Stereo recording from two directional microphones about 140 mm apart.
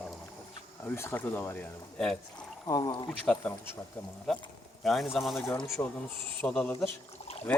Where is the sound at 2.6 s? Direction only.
25° left (ahead or behind).